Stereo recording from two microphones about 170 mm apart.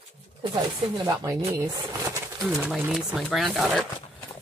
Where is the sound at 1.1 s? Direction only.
20° right (ahead or behind).